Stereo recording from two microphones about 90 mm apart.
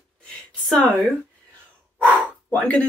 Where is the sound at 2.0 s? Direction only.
15° left (ahead or behind).